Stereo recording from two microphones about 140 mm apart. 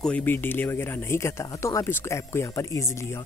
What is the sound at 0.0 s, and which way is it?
Speech, 10° left (ahead or behind).